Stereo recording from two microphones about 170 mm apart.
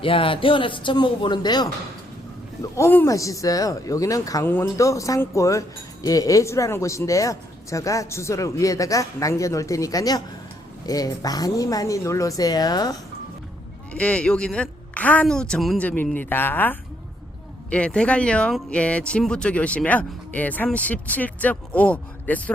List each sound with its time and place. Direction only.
0.0 s speech: 30° left (ahead or behind)
2.7 s speech: 15° left (ahead or behind)
13.9 s speech: 5° left (ahead or behind)